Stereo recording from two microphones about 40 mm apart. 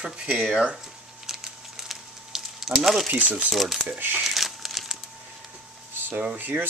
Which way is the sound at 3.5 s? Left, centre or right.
Centre.